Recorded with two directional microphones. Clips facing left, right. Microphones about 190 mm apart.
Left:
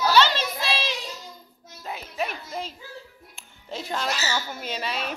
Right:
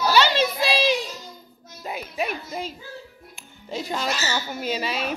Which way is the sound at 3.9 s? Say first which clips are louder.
Right 1 dB; 5° right (ahead or behind).